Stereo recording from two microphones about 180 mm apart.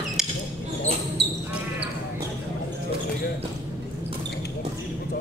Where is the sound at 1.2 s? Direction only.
70° right (ahead or behind).